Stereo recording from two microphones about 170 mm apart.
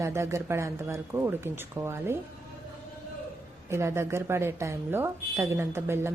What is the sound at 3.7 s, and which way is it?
A woman's voice, 15° right (ahead or behind).